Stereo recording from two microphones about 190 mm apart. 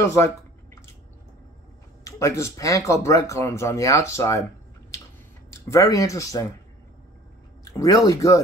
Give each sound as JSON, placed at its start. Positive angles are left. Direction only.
{"t": 0.0, "sound": "speech", "side_deg": 15}
{"t": 2.0, "sound": "speech", "side_deg": 15}
{"t": 5.5, "sound": "speech", "side_deg": 15}
{"t": 7.6, "sound": "speech", "side_deg": 20}